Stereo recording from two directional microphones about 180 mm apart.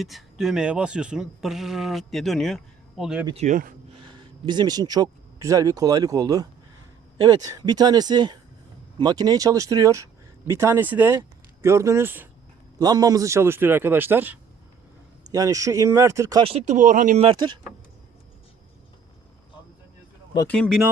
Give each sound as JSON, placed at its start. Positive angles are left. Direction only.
{"t": 0.0, "sound": "speech", "side_deg": 0}
{"t": 3.3, "sound": "speech", "side_deg": -45}
{"t": 3.9, "sound": "a man's voice", "side_deg": -25}
{"t": 16.4, "sound": "speech", "side_deg": -35}
{"t": 17.2, "sound": "speech", "side_deg": -25}
{"t": 20.5, "sound": "speech", "side_deg": 5}